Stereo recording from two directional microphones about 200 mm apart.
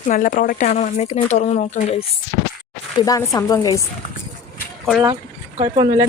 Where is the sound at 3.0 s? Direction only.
15° left (ahead or behind).